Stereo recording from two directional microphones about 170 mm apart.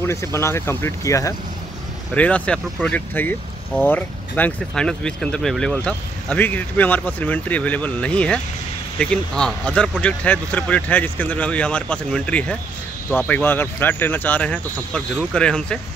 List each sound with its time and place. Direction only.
0.0 s speech: 15° left (ahead or behind)
2.1 s speech: 10° left (ahead or behind)